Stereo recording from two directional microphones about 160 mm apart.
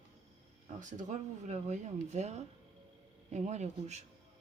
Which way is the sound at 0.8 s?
50° right (ahead or behind).